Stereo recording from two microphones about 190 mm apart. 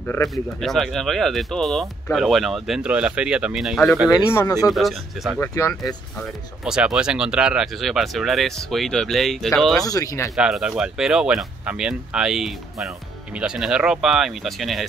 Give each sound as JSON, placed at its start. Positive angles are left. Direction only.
{"t": 0.0, "sound": "speech", "side_deg": 10}
{"t": 4.3, "sound": "speech", "side_deg": 15}
{"t": 4.6, "sound": "speech", "side_deg": 0}
{"t": 5.4, "sound": "speech", "side_deg": 15}
{"t": 6.6, "sound": "speech", "side_deg": -5}
{"t": 9.8, "sound": "speech", "side_deg": 20}
{"t": 10.3, "sound": "speech", "side_deg": -5}